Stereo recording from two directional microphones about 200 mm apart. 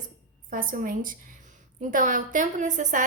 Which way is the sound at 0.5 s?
45° right (ahead or behind).